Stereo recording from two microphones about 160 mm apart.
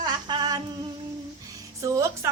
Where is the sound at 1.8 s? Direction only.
20° right (ahead or behind).